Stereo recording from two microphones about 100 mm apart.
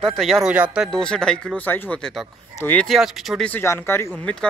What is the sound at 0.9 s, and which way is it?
Speech, 5° left (ahead or behind).